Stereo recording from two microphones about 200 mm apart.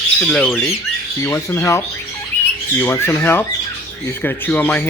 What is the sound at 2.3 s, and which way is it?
Bird, 10° left (ahead or behind).